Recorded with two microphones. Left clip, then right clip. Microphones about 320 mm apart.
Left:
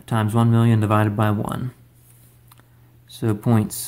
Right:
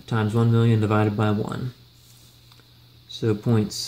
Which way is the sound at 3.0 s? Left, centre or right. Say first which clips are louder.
Left 1 dB; left.